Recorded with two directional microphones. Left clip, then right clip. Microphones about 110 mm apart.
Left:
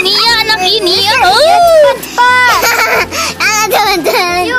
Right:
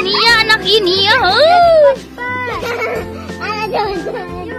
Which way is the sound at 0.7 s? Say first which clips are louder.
Left 2 dB; 10° left (ahead or behind).